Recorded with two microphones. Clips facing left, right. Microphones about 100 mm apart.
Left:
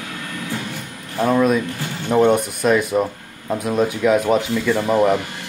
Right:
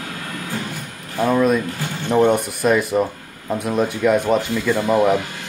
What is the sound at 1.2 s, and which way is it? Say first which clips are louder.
Speech: even; centre (ahead or behind).